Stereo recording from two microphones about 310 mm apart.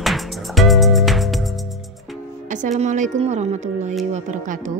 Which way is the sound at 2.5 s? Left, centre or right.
Right.